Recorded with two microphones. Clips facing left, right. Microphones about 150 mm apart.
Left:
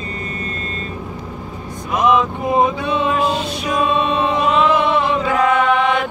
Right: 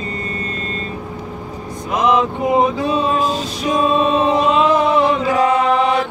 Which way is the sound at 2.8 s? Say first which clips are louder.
Right 1 dB; 35° right (ahead or behind).